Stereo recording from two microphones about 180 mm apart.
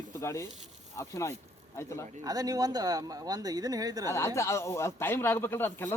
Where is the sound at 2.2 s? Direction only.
20° right (ahead or behind).